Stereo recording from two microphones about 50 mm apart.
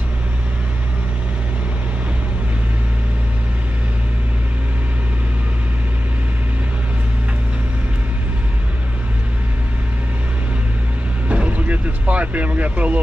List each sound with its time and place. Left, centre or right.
11.2 s vehicle: right